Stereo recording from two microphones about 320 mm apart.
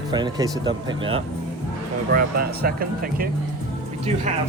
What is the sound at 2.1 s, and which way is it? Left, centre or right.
Speech, right.